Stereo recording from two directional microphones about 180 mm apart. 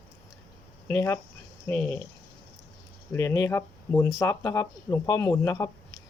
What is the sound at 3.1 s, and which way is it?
Speech, 15° left (ahead or behind).